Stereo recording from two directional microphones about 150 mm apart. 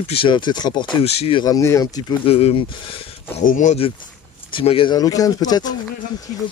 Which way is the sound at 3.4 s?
55° left (ahead or behind).